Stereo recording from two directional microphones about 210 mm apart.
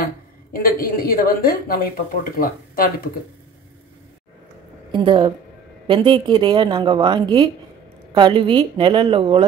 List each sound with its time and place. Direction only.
0.0 s a woman's voice: 45° left (ahead or behind)
4.9 s a woman's voice: 25° right (ahead or behind)